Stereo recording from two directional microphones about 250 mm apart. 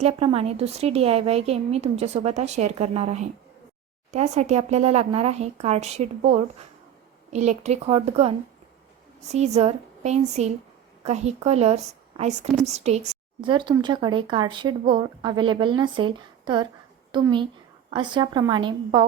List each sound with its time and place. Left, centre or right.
0.0 s speech: right
7.3 s a woman's voice: right